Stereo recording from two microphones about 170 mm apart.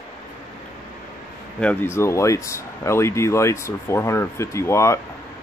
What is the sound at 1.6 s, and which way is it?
Speech, 10° left (ahead or behind).